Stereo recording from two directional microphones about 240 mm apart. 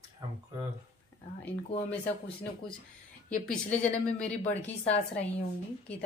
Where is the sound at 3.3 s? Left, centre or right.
Centre.